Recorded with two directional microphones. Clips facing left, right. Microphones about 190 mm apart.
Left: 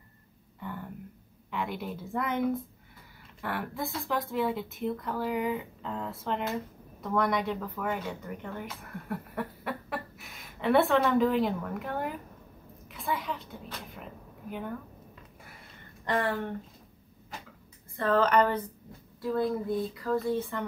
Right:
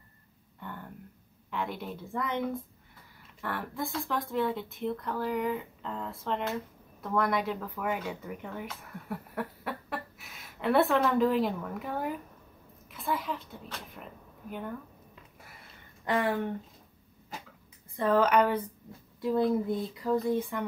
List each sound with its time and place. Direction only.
0.6 s a sound: centre (ahead or behind)
1.5 s a woman's voice: centre (ahead or behind)
16.1 s speech: 15° right (ahead or behind)
17.9 s speech: 10° right (ahead or behind)
19.2 s speech: 20° right (ahead or behind)